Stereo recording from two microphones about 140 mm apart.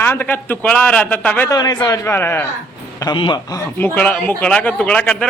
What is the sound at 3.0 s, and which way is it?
Speech, 30° left (ahead or behind).